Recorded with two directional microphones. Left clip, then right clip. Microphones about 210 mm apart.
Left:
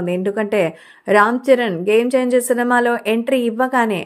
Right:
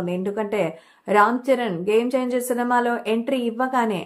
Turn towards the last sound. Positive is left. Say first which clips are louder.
# left 5 dB
turn(degrees=25)  # may be behind; listen again after turning